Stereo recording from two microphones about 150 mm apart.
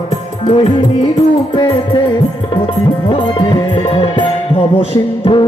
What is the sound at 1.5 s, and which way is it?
Music, 30° left (ahead or behind).